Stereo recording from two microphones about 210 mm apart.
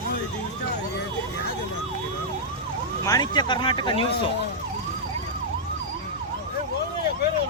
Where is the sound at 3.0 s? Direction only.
20° left (ahead or behind).